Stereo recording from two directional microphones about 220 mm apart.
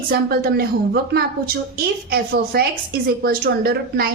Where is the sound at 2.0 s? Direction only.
45° right (ahead or behind).